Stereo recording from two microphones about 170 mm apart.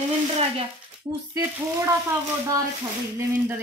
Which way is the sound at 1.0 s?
20° right (ahead or behind).